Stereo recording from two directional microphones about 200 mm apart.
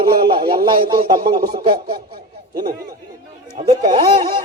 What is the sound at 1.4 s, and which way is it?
Speech, 50° right (ahead or behind).